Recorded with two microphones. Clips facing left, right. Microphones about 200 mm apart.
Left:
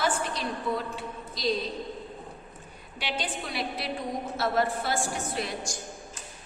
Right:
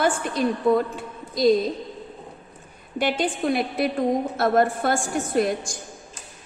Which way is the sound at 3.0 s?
50° right (ahead or behind).